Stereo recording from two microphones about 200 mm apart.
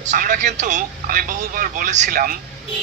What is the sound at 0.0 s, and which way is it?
Speech, 40° right (ahead or behind).